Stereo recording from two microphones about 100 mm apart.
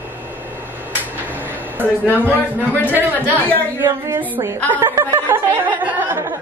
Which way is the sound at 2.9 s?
20° right (ahead or behind).